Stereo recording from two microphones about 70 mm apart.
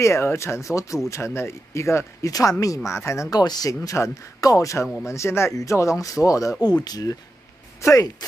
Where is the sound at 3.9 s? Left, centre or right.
Left.